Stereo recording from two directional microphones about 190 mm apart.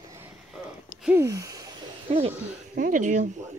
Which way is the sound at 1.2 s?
20° right (ahead or behind).